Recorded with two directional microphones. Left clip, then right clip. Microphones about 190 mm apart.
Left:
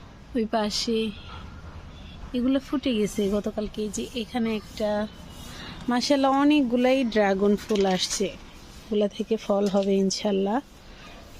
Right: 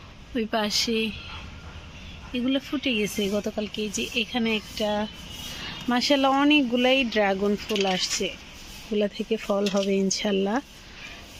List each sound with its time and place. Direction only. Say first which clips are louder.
0.3 s speech: right 1 dB; 10° left (ahead or behind)
2.3 s speech: left 1 dB; 15° left (ahead or behind)
3.4 s speech: even; centre (ahead or behind); by 8.3 s 25° left (ahead or behind)
8.9 s speech: left 1 dB; 10° left (ahead or behind)